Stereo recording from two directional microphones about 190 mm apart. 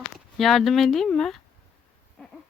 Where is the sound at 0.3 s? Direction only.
Centre (ahead or behind).